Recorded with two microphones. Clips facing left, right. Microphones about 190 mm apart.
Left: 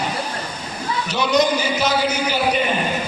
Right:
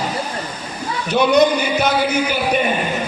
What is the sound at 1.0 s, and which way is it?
Speech, 55° right (ahead or behind).